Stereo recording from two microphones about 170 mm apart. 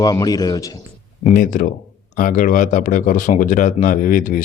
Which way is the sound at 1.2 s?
45° left (ahead or behind).